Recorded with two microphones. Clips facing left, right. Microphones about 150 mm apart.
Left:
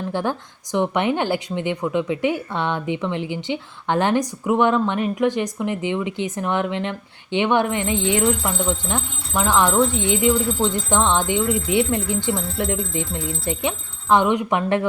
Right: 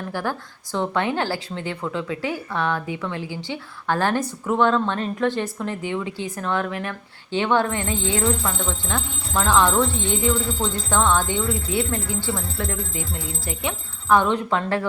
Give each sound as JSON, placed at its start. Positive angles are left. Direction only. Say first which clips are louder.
{"t": 0.1, "sound": "speech", "louder": "left 2 dB", "side_deg": 20}